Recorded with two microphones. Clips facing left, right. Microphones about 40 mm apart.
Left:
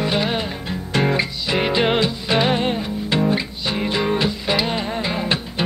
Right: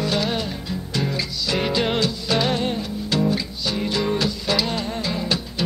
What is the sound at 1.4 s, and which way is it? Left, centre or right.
Music, left.